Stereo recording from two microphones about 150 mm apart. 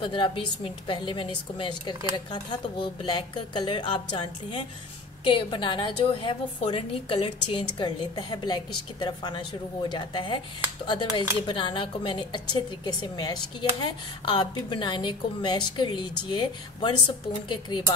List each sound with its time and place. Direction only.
0.0 s speech: 35° left (ahead or behind)